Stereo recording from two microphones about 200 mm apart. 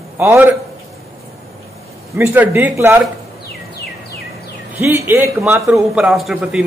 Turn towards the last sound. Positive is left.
turn(degrees=-5)  # may be behind; listen again after turning